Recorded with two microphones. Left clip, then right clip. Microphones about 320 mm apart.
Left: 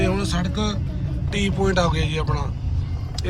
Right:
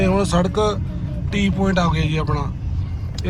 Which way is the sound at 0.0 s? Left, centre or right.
Centre.